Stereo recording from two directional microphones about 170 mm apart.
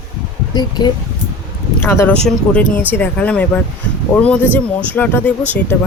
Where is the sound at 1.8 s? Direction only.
15° left (ahead or behind).